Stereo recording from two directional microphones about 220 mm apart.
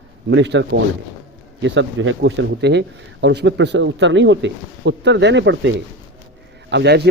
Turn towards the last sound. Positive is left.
turn(degrees=-50)  # may be behind; listen again after turning